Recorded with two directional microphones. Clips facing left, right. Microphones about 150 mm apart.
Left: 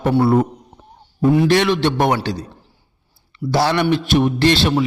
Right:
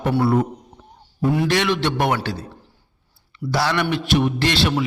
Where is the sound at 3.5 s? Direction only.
25° left (ahead or behind).